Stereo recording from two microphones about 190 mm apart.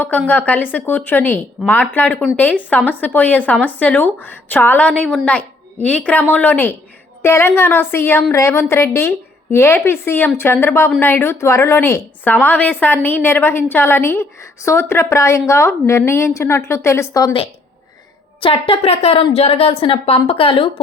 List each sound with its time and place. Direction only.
0.3 s a woman's voice: 10° left (ahead or behind)
18.3 s a woman's voice: 30° left (ahead or behind)